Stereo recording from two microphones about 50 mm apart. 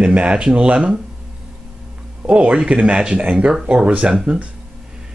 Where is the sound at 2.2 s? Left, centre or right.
Right.